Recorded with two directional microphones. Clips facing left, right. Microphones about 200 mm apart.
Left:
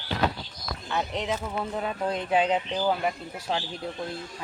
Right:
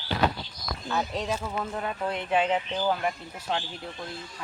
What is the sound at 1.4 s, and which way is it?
Speech, 10° left (ahead or behind).